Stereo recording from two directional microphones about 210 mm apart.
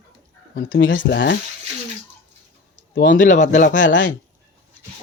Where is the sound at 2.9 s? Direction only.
40° left (ahead or behind).